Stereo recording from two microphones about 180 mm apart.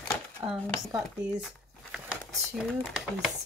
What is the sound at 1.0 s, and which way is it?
Speech, centre (ahead or behind).